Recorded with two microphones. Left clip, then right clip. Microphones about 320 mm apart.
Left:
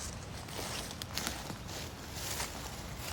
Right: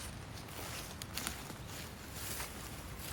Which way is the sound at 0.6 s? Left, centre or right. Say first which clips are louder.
Left 5 dB; left.